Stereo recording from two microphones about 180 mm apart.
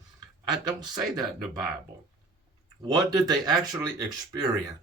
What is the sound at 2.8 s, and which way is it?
Speech, 20° right (ahead or behind).